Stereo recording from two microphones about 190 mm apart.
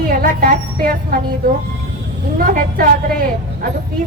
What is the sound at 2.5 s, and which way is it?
A woman's voice, 50° right (ahead or behind).